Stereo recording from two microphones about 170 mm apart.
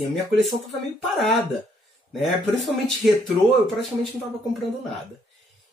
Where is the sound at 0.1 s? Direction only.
Centre (ahead or behind).